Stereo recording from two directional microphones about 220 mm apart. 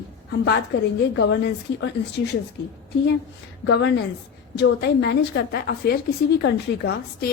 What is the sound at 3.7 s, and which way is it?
A woman's voice, 50° left (ahead or behind).